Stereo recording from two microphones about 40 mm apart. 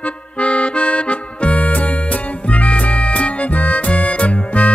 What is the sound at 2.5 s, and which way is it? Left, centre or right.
Music, left.